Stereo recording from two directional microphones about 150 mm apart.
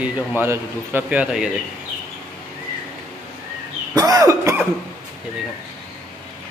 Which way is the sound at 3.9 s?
25° right (ahead or behind).